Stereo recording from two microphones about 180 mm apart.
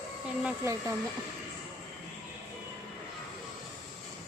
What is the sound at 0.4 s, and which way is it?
Speech, 15° right (ahead or behind).